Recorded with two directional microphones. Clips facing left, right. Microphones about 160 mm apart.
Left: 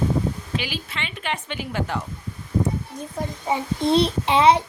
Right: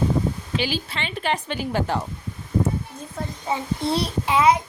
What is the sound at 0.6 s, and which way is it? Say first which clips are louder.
A woman's voice: right 4 dB; 30° right (ahead or behind).